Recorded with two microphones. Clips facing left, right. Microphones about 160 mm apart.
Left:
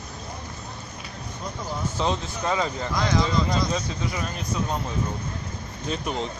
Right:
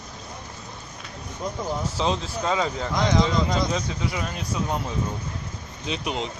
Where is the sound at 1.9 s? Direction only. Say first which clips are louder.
Left 1 dB; 5° right (ahead or behind).